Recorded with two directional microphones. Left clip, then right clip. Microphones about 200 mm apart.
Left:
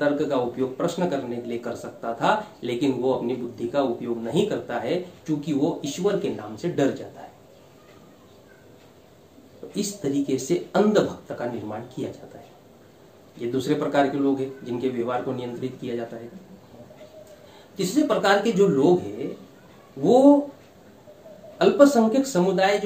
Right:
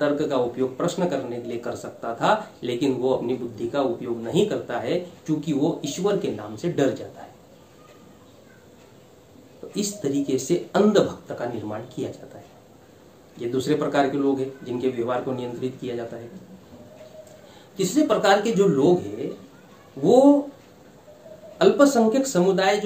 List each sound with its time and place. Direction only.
0.0 s speech: 5° right (ahead or behind)
9.8 s speech: 5° right (ahead or behind)
13.4 s speech: 5° right (ahead or behind)
17.7 s speech: 5° right (ahead or behind)
20.0 s speech: 5° right (ahead or behind)
21.5 s speech: 5° right (ahead or behind)